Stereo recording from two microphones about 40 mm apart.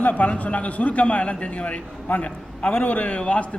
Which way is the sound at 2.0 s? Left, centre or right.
Left.